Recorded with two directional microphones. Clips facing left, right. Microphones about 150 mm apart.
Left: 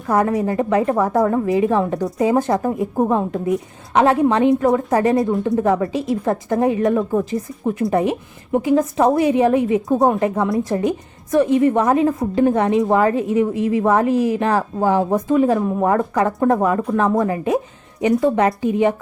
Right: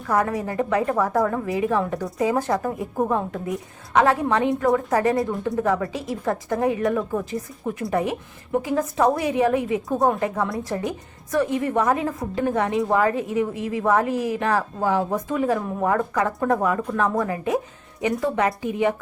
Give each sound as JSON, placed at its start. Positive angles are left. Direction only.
{"t": 0.1, "sound": "a woman's voice", "side_deg": 25}